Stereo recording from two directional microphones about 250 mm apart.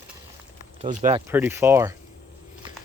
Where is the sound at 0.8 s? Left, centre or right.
Right.